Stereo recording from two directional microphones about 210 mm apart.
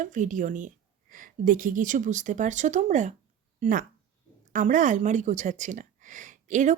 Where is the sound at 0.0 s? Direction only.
40° right (ahead or behind).